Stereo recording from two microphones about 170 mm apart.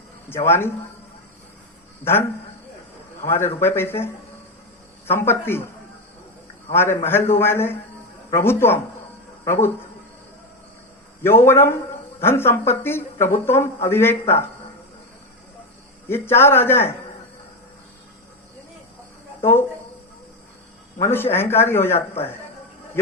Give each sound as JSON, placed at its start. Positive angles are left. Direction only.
{"t": 0.3, "sound": "speech", "side_deg": 15}
{"t": 3.2, "sound": "speech", "side_deg": 15}
{"t": 6.7, "sound": "speech", "side_deg": 15}
{"t": 11.2, "sound": "speech", "side_deg": 15}
{"t": 16.0, "sound": "speech", "side_deg": 15}
{"t": 19.4, "sound": "speech", "side_deg": 15}
{"t": 21.0, "sound": "speech", "side_deg": 15}